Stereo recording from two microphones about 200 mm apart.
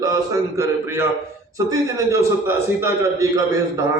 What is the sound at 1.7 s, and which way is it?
A man's voice, 15° right (ahead or behind).